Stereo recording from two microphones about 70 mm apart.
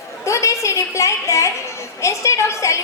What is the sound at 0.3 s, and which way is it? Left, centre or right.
A woman's voice, left.